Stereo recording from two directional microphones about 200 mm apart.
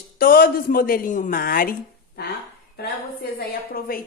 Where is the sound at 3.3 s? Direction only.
50° left (ahead or behind).